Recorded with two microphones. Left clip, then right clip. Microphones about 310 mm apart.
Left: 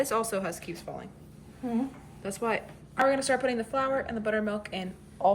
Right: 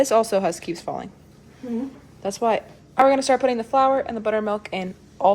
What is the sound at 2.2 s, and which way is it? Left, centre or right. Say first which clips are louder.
Speech: right 9 dB; centre.